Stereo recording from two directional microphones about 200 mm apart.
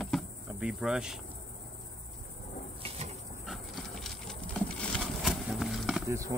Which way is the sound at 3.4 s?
Centre (ahead or behind).